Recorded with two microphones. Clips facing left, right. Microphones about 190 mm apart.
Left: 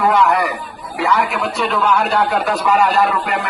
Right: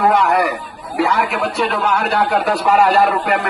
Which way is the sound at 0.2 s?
55° right (ahead or behind).